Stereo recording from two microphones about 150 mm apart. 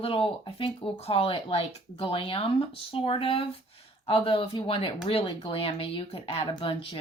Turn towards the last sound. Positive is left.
turn(degrees=35)  # may be behind; listen again after turning